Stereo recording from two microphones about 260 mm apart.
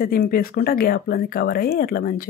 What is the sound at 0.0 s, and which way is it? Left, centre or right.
Speech, left.